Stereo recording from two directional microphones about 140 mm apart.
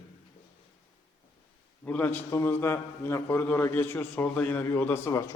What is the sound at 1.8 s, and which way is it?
A man's voice, 10° left (ahead or behind).